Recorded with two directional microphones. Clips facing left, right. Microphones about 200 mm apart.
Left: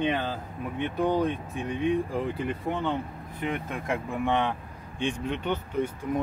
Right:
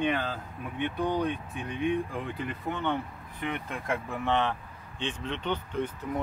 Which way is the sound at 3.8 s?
15° left (ahead or behind).